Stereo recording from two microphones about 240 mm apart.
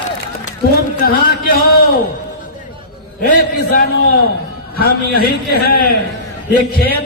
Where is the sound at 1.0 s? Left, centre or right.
Left.